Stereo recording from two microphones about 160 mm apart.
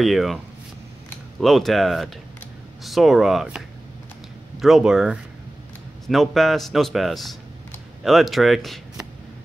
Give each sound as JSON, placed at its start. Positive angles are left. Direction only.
{"t": 0.0, "sound": "a man's voice", "side_deg": 0}
{"t": 1.4, "sound": "a man's voice", "side_deg": 0}